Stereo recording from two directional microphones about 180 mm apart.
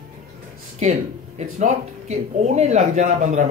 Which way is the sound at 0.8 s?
40° right (ahead or behind).